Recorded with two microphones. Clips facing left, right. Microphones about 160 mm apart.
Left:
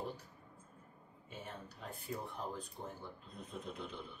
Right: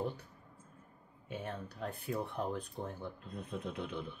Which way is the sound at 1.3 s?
60° right (ahead or behind).